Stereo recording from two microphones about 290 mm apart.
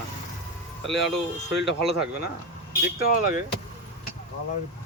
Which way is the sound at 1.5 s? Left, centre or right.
Left.